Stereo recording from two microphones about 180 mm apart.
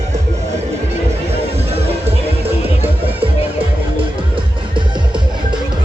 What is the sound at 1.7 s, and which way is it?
Music, 35° right (ahead or behind).